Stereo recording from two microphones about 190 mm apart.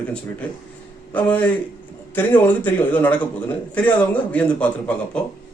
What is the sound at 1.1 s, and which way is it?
A man's voice, 10° left (ahead or behind).